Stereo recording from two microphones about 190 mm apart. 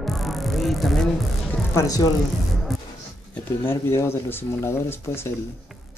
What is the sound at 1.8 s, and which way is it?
Speech, 20° left (ahead or behind).